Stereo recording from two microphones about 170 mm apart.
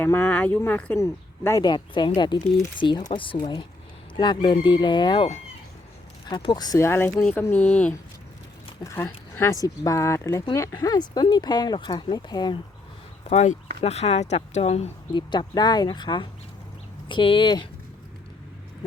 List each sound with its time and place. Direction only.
0.0 s speech: 10° left (ahead or behind)
13.3 s speech: 45° left (ahead or behind); by 17.7 s 25° left (ahead or behind)